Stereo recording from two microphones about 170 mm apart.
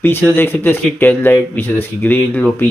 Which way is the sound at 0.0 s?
10° left (ahead or behind).